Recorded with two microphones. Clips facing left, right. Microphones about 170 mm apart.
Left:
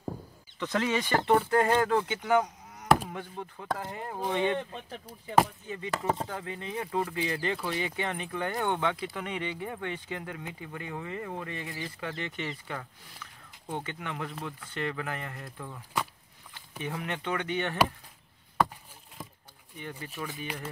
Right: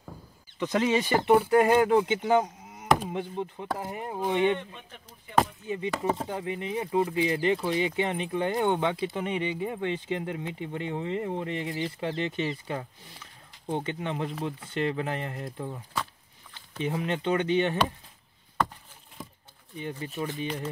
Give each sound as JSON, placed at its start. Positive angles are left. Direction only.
{"t": 0.6, "sound": "speech", "side_deg": -20}
{"t": 5.0, "sound": "speech", "side_deg": 10}
{"t": 5.9, "sound": "speech", "side_deg": 0}
{"t": 6.2, "sound": "speech", "side_deg": -20}
{"t": 16.8, "sound": "speech", "side_deg": -25}
{"t": 19.8, "sound": "speech", "side_deg": -20}